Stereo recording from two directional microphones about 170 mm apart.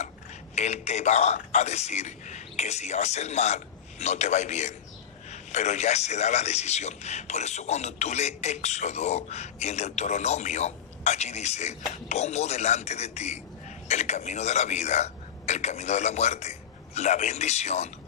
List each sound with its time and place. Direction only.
0.5 s a man's voice: 40° left (ahead or behind)